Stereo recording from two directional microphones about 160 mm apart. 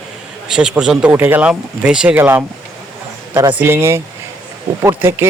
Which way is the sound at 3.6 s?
15° right (ahead or behind).